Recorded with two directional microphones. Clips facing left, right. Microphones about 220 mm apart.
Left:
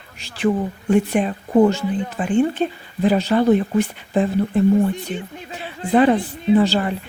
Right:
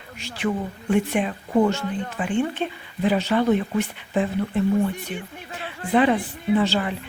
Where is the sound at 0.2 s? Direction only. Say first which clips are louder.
Left 6 dB; 35° left (ahead or behind).